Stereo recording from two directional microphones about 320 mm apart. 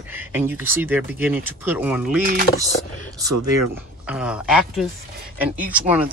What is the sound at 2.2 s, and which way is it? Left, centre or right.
Speech, right.